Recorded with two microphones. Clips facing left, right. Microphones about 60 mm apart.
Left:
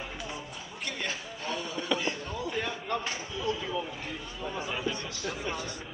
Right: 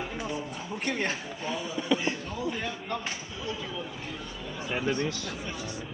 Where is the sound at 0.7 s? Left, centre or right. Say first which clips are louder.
Right 6 dB; right.